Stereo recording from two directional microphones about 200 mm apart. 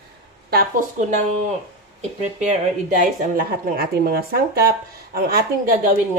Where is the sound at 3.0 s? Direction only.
40° right (ahead or behind).